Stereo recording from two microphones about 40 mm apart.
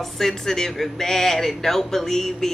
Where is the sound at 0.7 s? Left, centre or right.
Centre.